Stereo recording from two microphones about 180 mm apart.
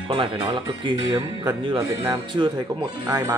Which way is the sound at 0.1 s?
25° right (ahead or behind).